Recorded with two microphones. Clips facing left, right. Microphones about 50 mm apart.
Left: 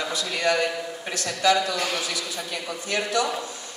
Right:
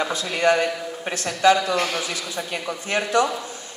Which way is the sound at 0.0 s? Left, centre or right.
Right.